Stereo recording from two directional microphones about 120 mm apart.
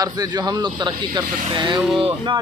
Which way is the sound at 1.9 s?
45° right (ahead or behind).